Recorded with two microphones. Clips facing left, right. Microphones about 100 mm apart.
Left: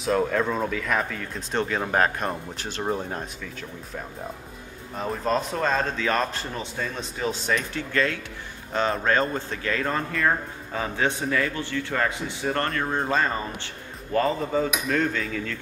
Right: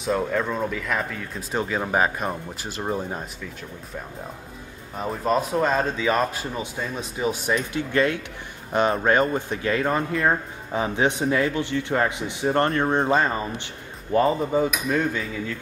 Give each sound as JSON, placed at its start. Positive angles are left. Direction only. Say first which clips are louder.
{"t": 0.0, "sound": "speech", "louder": "left 1 dB", "side_deg": 0}
{"t": 4.9, "sound": "speech", "louder": "right 2 dB", "side_deg": -5}